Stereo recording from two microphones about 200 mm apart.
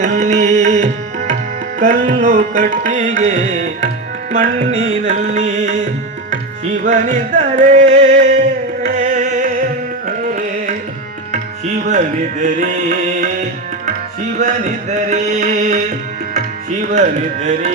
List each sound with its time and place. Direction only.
0.0 s tabla: 35° right (ahead or behind)
1.8 s music: 35° right (ahead or behind)
6.8 s music: 40° right (ahead or behind)
11.9 s music: 40° right (ahead or behind)
14.3 s music: 40° right (ahead or behind)
16.9 s music: 40° right (ahead or behind)